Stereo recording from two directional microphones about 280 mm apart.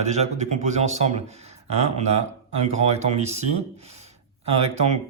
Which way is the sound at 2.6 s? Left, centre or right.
Right.